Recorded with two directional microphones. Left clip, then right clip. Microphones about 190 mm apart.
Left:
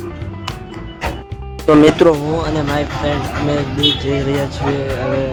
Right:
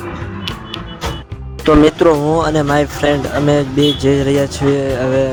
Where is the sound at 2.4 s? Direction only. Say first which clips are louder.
Right 5 dB; 45° right (ahead or behind).